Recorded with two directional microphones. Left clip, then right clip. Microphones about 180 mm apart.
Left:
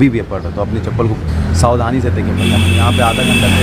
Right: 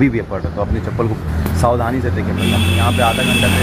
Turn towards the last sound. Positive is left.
turn(degrees=70)  # may be behind; listen again after turning